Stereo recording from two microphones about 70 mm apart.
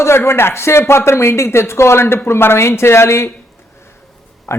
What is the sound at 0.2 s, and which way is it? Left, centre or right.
Speech, left.